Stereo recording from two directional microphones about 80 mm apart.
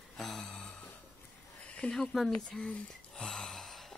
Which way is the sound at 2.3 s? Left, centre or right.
Centre.